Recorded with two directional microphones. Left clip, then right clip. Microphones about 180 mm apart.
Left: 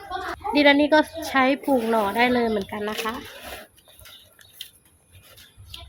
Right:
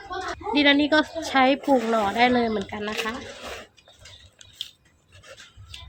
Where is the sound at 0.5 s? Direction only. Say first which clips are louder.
Left 2 dB; 25° left (ahead or behind).